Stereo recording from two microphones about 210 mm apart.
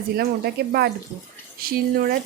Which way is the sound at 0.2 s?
50° right (ahead or behind).